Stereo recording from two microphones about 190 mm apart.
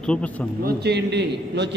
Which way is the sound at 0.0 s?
5° left (ahead or behind).